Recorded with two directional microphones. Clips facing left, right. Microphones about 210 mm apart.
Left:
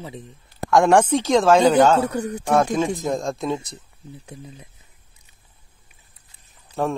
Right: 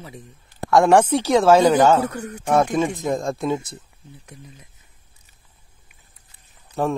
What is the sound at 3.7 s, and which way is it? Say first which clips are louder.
Speech: left 2 dB; 25° left (ahead or behind).